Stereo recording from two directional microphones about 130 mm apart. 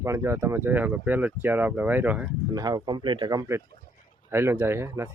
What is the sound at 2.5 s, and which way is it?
Speech, 30° right (ahead or behind).